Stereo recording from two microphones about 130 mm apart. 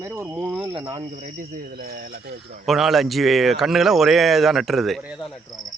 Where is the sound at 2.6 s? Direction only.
Centre (ahead or behind).